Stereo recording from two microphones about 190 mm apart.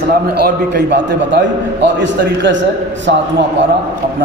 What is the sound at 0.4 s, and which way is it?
A man's voice, 60° right (ahead or behind).